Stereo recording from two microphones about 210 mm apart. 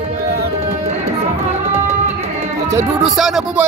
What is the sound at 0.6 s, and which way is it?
Music, 30° right (ahead or behind).